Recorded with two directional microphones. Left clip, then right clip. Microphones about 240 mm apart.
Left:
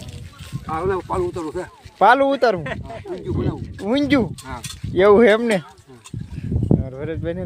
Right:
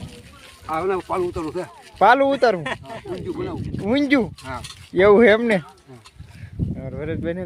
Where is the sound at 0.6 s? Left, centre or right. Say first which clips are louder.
Even; centre.